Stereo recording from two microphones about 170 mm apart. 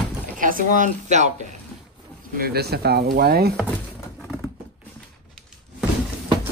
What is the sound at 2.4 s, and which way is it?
Speech, 70° right (ahead or behind).